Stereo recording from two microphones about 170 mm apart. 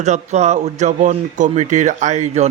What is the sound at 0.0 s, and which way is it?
A man's voice, 45° right (ahead or behind).